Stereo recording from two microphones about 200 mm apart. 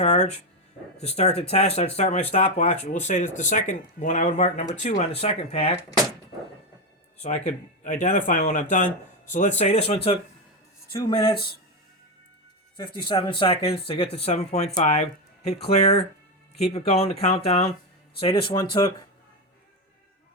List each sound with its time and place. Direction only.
0.0 s speech: 35° left (ahead or behind)
7.2 s speech: 35° left (ahead or behind)
12.7 s speech: 25° left (ahead or behind)